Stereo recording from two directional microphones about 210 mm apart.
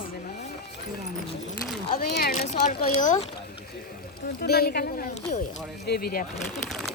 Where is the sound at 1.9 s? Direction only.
45° left (ahead or behind).